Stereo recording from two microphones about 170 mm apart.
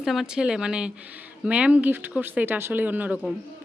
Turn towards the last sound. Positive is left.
turn(degrees=-10)  # may be behind; listen again after turning